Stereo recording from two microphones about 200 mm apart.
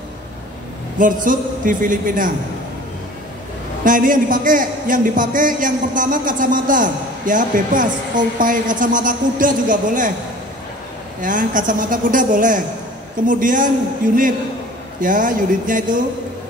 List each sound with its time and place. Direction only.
0.9 s a man's voice: 40° right (ahead or behind)
3.8 s a man's voice: 40° right (ahead or behind)
11.1 s a man's voice: 40° right (ahead or behind)